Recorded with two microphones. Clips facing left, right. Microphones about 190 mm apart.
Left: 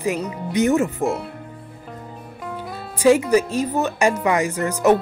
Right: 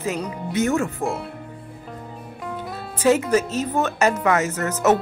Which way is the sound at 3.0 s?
10° left (ahead or behind).